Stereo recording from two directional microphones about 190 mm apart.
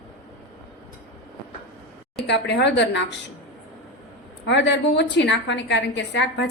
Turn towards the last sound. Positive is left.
turn(degrees=65)  # may be behind; listen again after turning